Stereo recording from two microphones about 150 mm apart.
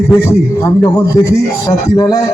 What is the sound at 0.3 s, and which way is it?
A man's voice, 20° left (ahead or behind).